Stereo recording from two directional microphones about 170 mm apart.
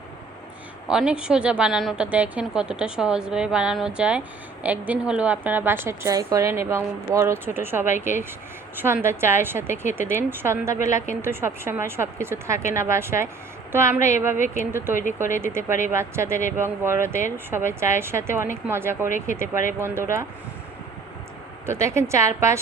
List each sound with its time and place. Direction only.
0.9 s a woman's voice: 5° right (ahead or behind)
21.7 s a woman's voice: 15° right (ahead or behind)